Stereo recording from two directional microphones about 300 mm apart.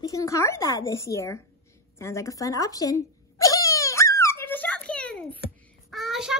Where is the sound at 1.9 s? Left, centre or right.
Centre.